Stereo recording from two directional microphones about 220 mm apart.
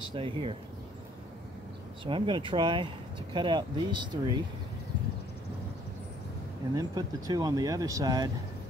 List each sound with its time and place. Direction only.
0.1 s speech: 25° right (ahead or behind)
2.0 s speech: 25° right (ahead or behind)
6.7 s speech: 15° right (ahead or behind)